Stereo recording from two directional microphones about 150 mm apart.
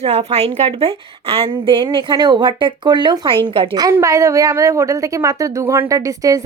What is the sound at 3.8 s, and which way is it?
A woman's voice, 20° right (ahead or behind).